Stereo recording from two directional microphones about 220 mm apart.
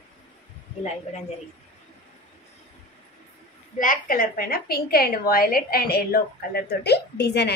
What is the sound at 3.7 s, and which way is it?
A woman's voice, 40° left (ahead or behind).